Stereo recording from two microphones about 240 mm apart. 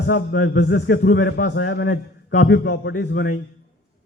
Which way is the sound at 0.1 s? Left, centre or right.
Left.